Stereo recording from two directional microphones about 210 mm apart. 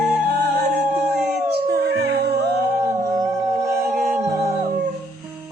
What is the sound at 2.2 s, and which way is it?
Music, 50° right (ahead or behind).